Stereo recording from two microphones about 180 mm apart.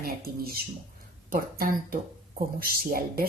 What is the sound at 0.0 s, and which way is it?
Speech, 55° right (ahead or behind).